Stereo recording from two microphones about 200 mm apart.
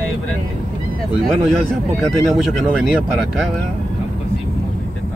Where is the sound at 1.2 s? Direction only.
Centre (ahead or behind).